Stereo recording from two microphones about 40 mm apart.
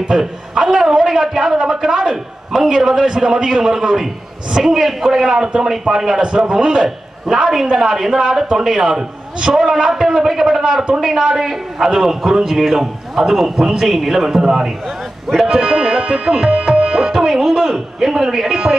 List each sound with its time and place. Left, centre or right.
0.1 s a man's voice: centre
15.4 s tabla: centre
17.3 s speech: centre